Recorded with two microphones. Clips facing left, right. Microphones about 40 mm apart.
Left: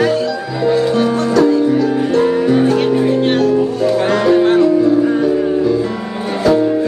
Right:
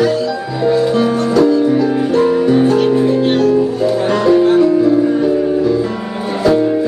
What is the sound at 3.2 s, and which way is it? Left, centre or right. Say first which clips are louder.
Music: right 1 dB; left.